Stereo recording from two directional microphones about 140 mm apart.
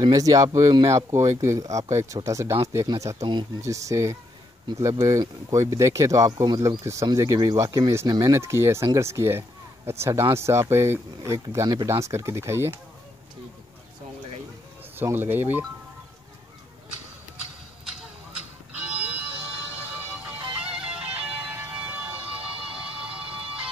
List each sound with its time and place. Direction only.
0.0 s speech: 25° right (ahead or behind)
15.0 s speech: 15° right (ahead or behind)
18.7 s music: 10° right (ahead or behind)
20.6 s music: 5° right (ahead or behind)
22.6 s a sound: 40° right (ahead or behind)